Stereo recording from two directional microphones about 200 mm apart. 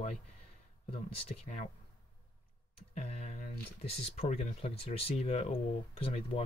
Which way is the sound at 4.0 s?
30° left (ahead or behind).